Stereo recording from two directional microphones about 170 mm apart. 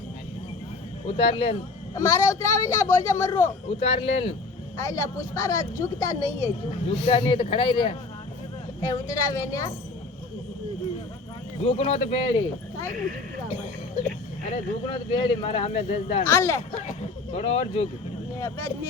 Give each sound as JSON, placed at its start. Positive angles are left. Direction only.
{"t": 1.0, "sound": "speech", "side_deg": 30}
{"t": 2.0, "sound": "a woman's voice", "side_deg": 20}
{"t": 3.4, "sound": "speech", "side_deg": 35}
{"t": 4.8, "sound": "a woman's voice", "side_deg": 20}
{"t": 6.9, "sound": "a woman's voice", "side_deg": 35}
{"t": 11.6, "sound": "speech", "side_deg": 35}
{"t": 14.8, "sound": "speech", "side_deg": 25}
{"t": 16.2, "sound": "speech", "side_deg": 15}
{"t": 17.3, "sound": "speech", "side_deg": 35}
{"t": 18.3, "sound": "speech", "side_deg": 15}